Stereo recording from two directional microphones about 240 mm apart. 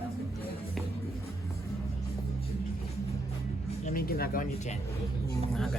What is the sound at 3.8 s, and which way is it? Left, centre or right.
Speech, left.